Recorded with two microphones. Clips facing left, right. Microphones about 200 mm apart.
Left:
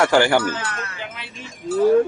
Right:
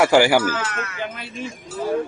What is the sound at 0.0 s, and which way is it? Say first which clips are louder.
Speech: right 1 dB; 10° right (ahead or behind).